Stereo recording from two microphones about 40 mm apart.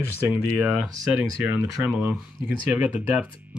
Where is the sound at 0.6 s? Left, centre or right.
Right.